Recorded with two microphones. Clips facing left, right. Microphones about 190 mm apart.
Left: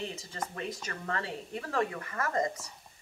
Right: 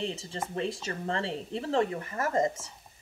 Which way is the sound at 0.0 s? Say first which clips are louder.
Right 4 dB; 30° right (ahead or behind).